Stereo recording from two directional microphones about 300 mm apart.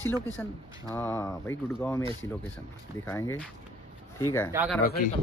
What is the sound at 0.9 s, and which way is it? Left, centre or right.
Speech, centre.